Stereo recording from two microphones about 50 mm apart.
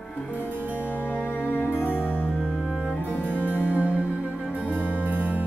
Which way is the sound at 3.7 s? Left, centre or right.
Right.